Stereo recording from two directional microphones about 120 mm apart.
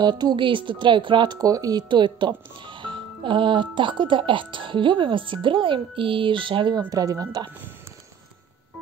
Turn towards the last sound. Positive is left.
turn(degrees=-30)  # may be behind; listen again after turning